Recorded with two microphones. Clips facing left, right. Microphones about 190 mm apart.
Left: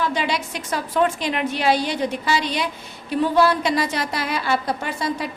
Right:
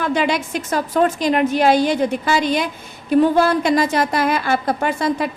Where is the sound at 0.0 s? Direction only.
55° right (ahead or behind).